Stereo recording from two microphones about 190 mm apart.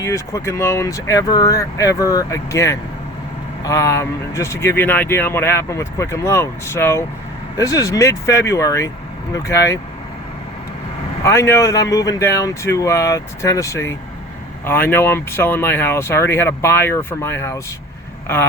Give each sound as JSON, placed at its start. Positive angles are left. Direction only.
{"t": 0.0, "sound": "speech", "side_deg": 15}
{"t": 11.2, "sound": "speech", "side_deg": 15}